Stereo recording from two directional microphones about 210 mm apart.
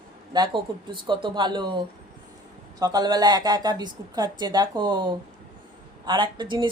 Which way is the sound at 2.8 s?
20° right (ahead or behind).